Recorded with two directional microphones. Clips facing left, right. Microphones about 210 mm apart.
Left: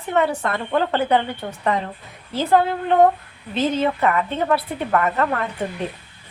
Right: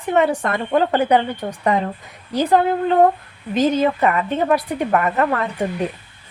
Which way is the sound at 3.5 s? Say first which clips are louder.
Right 4 dB; 15° right (ahead or behind).